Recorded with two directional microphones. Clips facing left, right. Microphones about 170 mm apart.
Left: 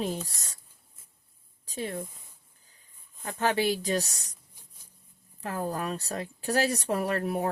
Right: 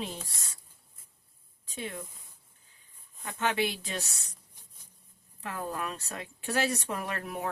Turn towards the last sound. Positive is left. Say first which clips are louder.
# left 7 dB
turn(degrees=35)  # may be behind; listen again after turning